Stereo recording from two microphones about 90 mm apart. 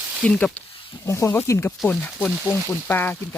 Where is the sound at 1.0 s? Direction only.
30° left (ahead or behind).